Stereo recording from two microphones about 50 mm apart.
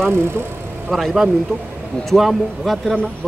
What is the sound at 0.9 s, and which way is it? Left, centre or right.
Speech, centre.